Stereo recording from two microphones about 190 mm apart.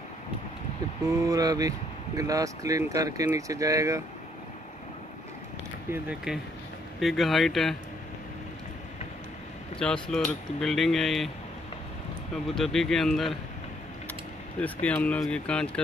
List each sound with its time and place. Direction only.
1.2 s speech: 20° right (ahead or behind)
5.9 s speech: 5° right (ahead or behind)
10.0 s speech: 5° left (ahead or behind)
12.4 s speech: centre (ahead or behind)
14.6 s speech: 5° left (ahead or behind)